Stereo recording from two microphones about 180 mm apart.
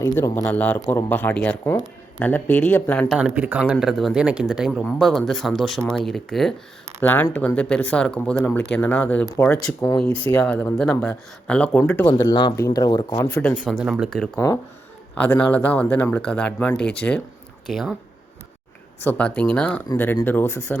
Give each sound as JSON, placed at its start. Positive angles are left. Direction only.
{"t": 0.0, "sound": "speech", "side_deg": 20}
{"t": 0.5, "sound": "speech", "side_deg": 10}
{"t": 3.2, "sound": "speech", "side_deg": -10}
{"t": 10.0, "sound": "speech", "side_deg": 5}
{"t": 12.3, "sound": "speech", "side_deg": 25}
{"t": 13.2, "sound": "speech", "side_deg": 10}
{"t": 14.3, "sound": "speech", "side_deg": 15}
{"t": 19.0, "sound": "speech", "side_deg": 10}